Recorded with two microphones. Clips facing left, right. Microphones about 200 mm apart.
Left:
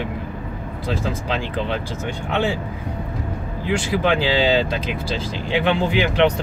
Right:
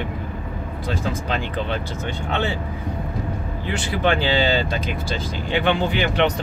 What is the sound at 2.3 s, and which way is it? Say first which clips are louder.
Speech: left 3 dB; 10° left (ahead or behind).